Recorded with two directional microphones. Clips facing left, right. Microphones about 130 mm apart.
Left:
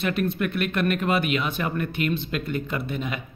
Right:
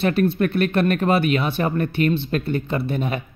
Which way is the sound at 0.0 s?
35° right (ahead or behind).